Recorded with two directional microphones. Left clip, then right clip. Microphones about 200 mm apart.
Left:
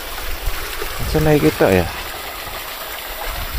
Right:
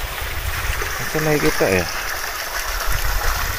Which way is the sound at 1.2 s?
25° left (ahead or behind).